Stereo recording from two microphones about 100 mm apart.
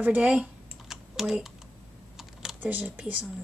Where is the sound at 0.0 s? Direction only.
15° right (ahead or behind).